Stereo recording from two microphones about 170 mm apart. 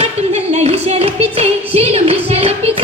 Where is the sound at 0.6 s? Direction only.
40° right (ahead or behind).